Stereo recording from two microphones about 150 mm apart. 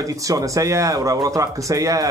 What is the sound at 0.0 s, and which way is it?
Speech, 20° right (ahead or behind).